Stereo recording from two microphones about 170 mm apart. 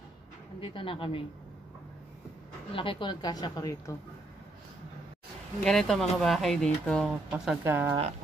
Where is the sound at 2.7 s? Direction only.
30° left (ahead or behind).